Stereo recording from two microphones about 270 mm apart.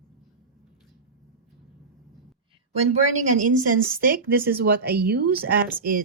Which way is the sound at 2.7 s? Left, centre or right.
Right.